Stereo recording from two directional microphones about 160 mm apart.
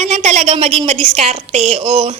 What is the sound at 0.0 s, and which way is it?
A woman's voice, 45° right (ahead or behind).